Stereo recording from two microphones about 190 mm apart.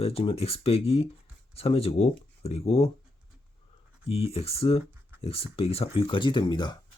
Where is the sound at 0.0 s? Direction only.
30° left (ahead or behind).